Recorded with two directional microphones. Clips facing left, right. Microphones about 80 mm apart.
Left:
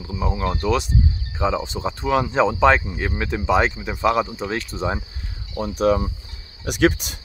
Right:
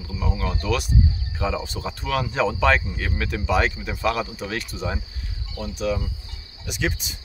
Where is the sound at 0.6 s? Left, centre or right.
Left.